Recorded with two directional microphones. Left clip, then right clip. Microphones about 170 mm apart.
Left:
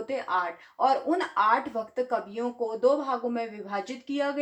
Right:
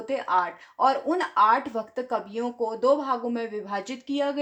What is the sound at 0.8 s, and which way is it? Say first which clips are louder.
A woman's voice: right 2 dB; 60° right (ahead or behind).